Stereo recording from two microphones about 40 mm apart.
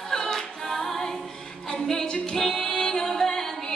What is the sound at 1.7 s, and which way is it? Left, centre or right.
Music, centre.